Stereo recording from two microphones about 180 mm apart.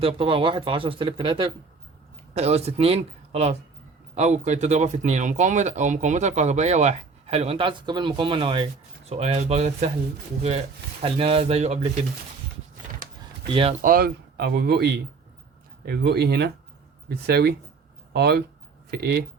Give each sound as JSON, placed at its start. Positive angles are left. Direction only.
{"t": 0.0, "sound": "speech", "side_deg": -30}
{"t": 11.0, "sound": "speech", "side_deg": -30}
{"t": 13.5, "sound": "speech", "side_deg": -30}
{"t": 13.8, "sound": "speech", "side_deg": -55}